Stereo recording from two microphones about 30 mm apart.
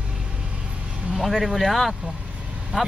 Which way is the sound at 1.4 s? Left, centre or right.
Centre.